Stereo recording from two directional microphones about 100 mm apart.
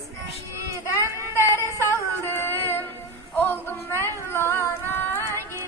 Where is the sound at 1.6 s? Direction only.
25° left (ahead or behind).